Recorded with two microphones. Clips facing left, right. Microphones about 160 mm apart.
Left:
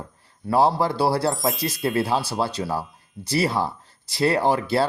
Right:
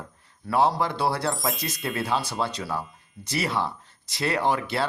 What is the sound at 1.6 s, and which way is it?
Speech, 35° left (ahead or behind).